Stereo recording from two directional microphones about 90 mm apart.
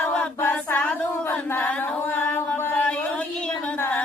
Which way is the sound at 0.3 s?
25° left (ahead or behind).